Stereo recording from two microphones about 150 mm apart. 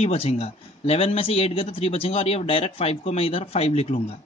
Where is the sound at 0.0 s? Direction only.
40° left (ahead or behind).